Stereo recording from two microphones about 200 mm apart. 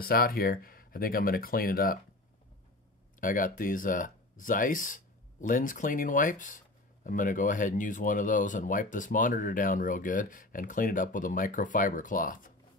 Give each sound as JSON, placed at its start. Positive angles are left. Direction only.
{"t": 0.0, "sound": "speech", "side_deg": 50}
{"t": 3.2, "sound": "speech", "side_deg": 40}